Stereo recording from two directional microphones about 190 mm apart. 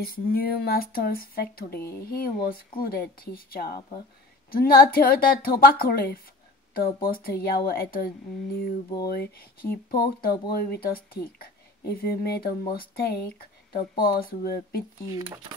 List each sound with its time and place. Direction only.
0.0 s speech: 50° left (ahead or behind)